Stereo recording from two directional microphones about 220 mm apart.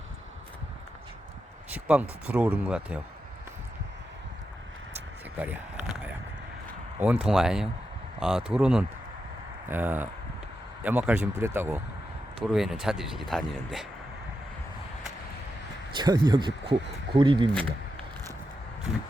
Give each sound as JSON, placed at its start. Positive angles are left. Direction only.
{"t": 1.7, "sound": "speech", "side_deg": -5}
{"t": 5.4, "sound": "a sound", "side_deg": -5}
{"t": 7.0, "sound": "speech", "side_deg": -5}
{"t": 16.0, "sound": "speech", "side_deg": -20}